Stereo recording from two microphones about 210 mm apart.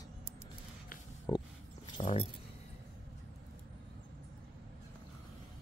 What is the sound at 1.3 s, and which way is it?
Speech, 25° left (ahead or behind).